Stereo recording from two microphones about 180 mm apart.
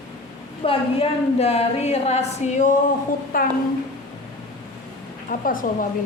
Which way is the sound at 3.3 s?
50° left (ahead or behind).